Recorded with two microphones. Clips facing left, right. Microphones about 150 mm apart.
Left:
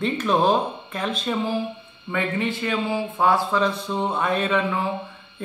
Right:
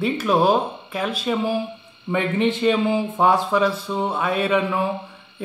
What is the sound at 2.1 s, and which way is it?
A man's voice, 20° right (ahead or behind).